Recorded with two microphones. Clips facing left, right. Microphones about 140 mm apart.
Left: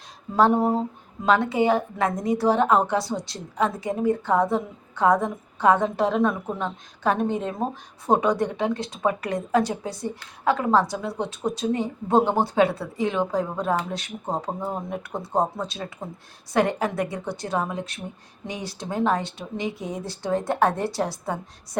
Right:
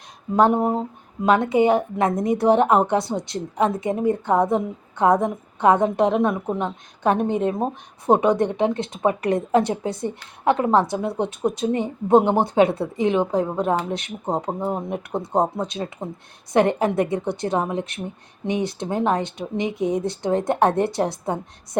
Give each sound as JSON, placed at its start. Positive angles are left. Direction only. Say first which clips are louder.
{"t": 0.3, "sound": "a woman's voice", "louder": "right 1 dB", "side_deg": -20}